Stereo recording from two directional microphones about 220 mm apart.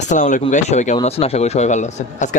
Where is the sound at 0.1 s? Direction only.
35° left (ahead or behind).